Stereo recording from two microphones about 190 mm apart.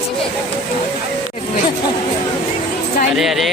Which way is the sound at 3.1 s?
Centre (ahead or behind).